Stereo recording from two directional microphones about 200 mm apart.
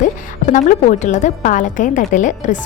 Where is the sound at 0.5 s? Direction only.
40° left (ahead or behind).